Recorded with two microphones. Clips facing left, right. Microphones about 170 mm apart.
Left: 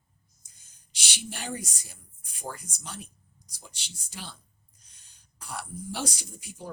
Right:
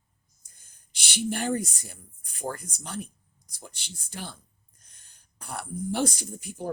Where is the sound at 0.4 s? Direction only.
55° right (ahead or behind).